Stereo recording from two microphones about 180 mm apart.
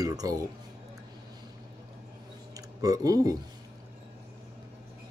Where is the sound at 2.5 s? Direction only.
20° right (ahead or behind).